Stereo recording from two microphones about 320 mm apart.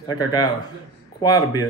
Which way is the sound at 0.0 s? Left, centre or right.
Centre.